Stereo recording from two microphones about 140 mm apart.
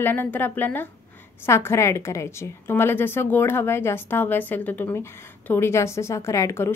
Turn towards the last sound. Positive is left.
turn(degrees=20)  # may be behind; listen again after turning